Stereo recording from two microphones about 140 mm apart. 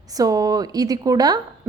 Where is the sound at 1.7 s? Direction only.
15° right (ahead or behind).